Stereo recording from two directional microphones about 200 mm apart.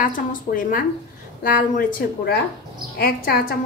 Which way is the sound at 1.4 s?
45° left (ahead or behind).